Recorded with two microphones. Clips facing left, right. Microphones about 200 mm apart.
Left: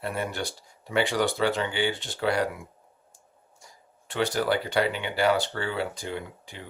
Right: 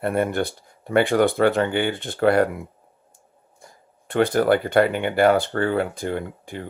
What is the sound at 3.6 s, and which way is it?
Speech, 55° right (ahead or behind).